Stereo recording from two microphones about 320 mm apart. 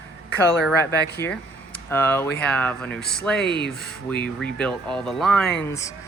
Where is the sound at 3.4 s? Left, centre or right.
Left.